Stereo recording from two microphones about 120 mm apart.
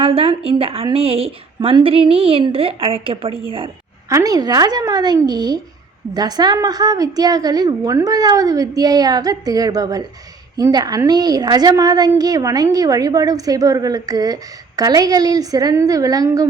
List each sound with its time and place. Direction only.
0.0 s a woman's voice: 50° right (ahead or behind)
4.1 s a woman's voice: 30° right (ahead or behind)